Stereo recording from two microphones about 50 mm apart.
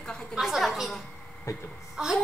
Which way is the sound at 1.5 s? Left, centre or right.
Left.